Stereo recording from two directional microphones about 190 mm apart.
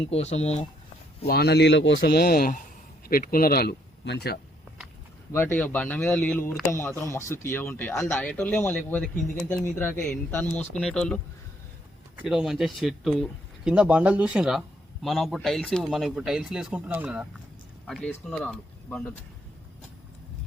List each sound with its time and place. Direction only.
0.1 s speech: 35° left (ahead or behind)
1.3 s a man's voice: 55° left (ahead or behind)
5.3 s speech: 10° left (ahead or behind); by 17.2 s 5° right (ahead or behind)
17.8 s speech: 5° left (ahead or behind)